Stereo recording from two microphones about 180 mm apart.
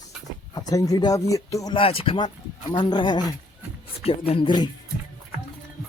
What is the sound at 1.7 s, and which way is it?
Speech, 30° left (ahead or behind).